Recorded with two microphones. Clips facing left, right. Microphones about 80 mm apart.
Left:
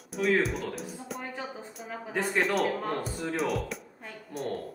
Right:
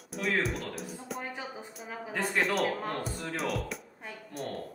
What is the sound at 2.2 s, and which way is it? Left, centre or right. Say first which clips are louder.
Speech: left 2 dB; centre.